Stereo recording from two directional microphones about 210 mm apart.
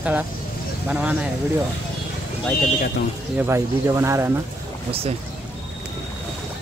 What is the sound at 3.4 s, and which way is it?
Speech, 10° right (ahead or behind).